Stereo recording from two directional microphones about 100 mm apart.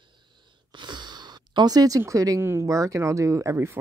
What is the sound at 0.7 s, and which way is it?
Speech, 50° right (ahead or behind).